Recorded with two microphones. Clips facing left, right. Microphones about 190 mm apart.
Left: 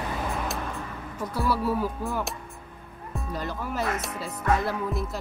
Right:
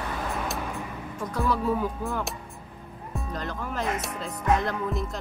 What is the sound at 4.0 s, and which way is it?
Music, 5° left (ahead or behind).